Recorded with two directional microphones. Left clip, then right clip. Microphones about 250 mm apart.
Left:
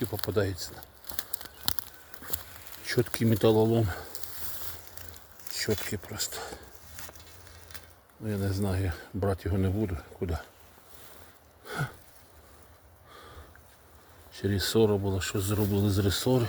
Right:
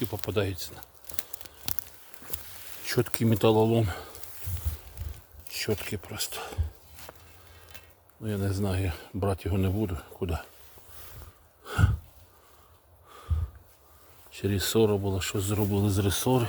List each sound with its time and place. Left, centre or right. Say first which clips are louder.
0.0 s speech: even; centre
0.7 s crumpling: left 2 dB; centre
2.8 s speech: even; centre
5.5 s a sound: even; centre
5.7 s speech: even; centre
8.2 s speech: right 1 dB; centre
11.6 s gasp: right 3 dB; centre
14.3 s speech: even; centre